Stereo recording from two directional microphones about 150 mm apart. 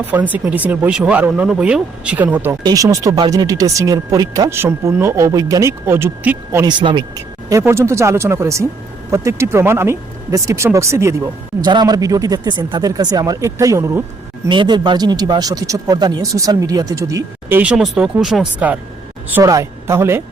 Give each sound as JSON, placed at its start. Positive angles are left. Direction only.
{"t": 0.1, "sound": "speech", "side_deg": -10}
{"t": 6.7, "sound": "speech", "side_deg": -30}
{"t": 7.5, "sound": "speech", "side_deg": -20}
{"t": 14.4, "sound": "speech", "side_deg": -30}
{"t": 17.6, "sound": "speech", "side_deg": -5}
{"t": 19.3, "sound": "speech", "side_deg": -20}